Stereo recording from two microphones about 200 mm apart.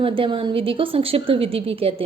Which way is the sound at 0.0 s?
25° right (ahead or behind).